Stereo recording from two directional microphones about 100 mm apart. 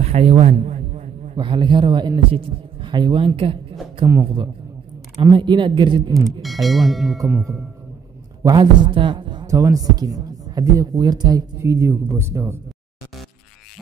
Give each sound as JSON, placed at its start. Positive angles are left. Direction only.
{"t": 0.0, "sound": "a man's voice", "side_deg": -90}
{"t": 2.3, "sound": "a man's voice", "side_deg": -60}
{"t": 5.2, "sound": "speech", "side_deg": -50}
{"t": 6.4, "sound": "speech", "side_deg": 0}
{"t": 8.5, "sound": "speech", "side_deg": -50}
{"t": 9.5, "sound": "speech", "side_deg": -35}